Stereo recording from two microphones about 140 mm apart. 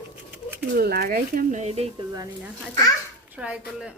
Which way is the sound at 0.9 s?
90° right.